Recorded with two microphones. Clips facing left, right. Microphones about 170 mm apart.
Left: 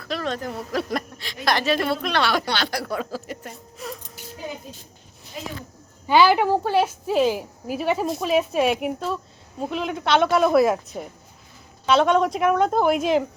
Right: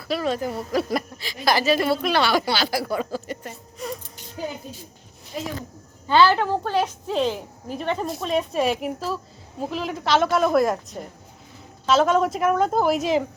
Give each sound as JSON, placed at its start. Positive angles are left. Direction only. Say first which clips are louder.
{"t": 0.0, "sound": "a woman's voice", "louder": "right 3 dB", "side_deg": -5}
{"t": 6.1, "sound": "a woman's voice", "louder": "left 1 dB", "side_deg": 15}